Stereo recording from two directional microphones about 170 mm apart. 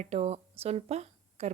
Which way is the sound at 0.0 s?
40° right (ahead or behind).